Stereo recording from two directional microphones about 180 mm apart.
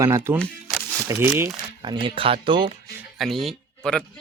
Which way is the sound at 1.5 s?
25° right (ahead or behind).